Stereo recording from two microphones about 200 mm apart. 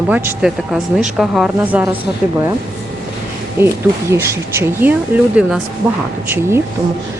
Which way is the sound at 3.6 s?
10° right (ahead or behind).